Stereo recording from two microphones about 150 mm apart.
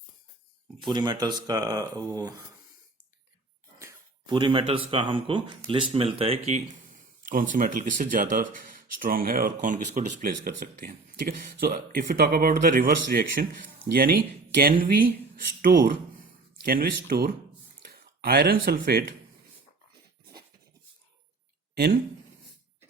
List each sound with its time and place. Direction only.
0.8 s speech: 30° right (ahead or behind)
4.3 s speech: 30° right (ahead or behind)
7.3 s speech: 65° right (ahead or behind)
15.7 s speech: 90° right
16.6 s speech: 80° right
17.9 s speech: 90° right